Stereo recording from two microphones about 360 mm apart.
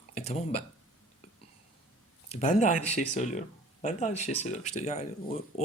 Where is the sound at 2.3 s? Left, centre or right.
Centre.